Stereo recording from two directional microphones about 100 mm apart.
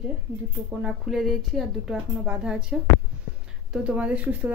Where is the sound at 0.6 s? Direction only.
10° right (ahead or behind).